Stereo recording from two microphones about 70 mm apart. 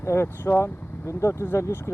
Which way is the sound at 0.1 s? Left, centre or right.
Left.